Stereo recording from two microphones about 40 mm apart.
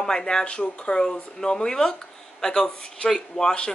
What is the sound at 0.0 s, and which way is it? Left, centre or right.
Speech, centre.